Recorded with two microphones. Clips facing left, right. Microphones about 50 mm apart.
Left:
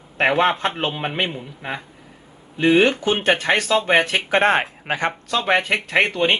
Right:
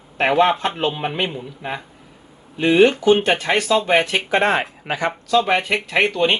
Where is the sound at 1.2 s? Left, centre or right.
Centre.